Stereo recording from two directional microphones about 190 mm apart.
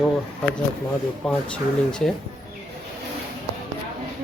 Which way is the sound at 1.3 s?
5° left (ahead or behind).